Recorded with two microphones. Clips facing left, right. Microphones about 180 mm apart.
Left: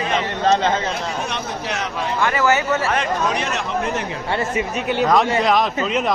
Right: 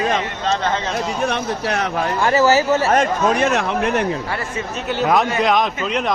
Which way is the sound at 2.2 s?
35° right (ahead or behind).